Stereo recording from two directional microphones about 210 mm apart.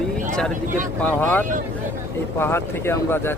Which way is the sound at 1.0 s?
10° left (ahead or behind).